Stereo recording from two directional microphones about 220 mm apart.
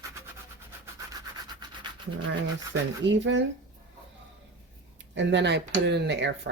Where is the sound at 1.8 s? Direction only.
20° right (ahead or behind).